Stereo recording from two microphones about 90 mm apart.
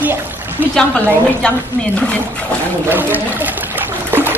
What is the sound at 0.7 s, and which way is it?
A woman's voice, 10° left (ahead or behind).